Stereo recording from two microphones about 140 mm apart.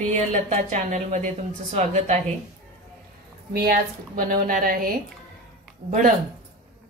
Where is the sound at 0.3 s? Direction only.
60° right (ahead or behind).